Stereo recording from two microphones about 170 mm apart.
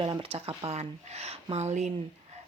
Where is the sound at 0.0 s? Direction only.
35° right (ahead or behind).